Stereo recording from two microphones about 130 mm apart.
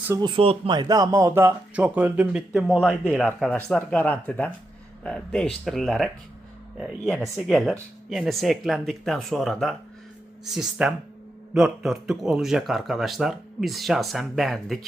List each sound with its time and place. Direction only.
0.2 s speech: 40° right (ahead or behind)
0.8 s speech: 30° right (ahead or behind); by 14.8 s centre (ahead or behind)